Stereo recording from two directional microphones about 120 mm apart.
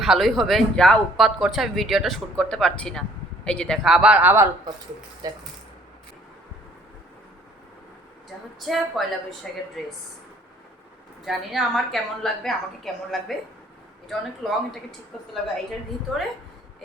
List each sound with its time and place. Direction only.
0.0 s speech: centre (ahead or behind)
3.9 s speech: 10° right (ahead or behind)
5.2 s speech: 30° right (ahead or behind)
8.5 s speech: centre (ahead or behind)
11.3 s speech: centre (ahead or behind)